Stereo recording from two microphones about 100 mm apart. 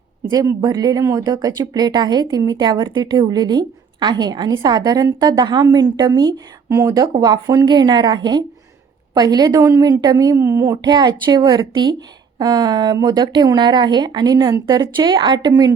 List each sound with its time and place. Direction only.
0.3 s a woman's voice: 35° right (ahead or behind)
14.9 s a woman's voice: 50° right (ahead or behind)